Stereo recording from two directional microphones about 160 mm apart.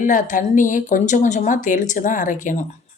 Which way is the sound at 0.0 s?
55° left (ahead or behind).